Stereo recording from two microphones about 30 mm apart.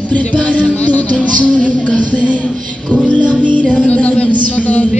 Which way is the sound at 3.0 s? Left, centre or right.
Left.